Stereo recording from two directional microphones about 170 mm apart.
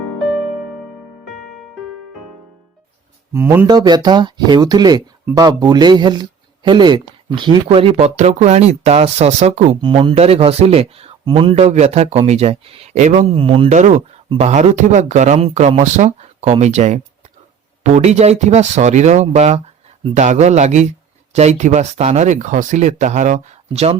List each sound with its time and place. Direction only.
3.3 s speech: 15° right (ahead or behind)
3.7 s speech: 25° right (ahead or behind)
13.7 s speech: 45° right (ahead or behind)